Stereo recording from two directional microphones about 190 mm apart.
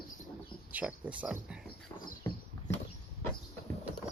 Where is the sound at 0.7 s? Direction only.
5° right (ahead or behind).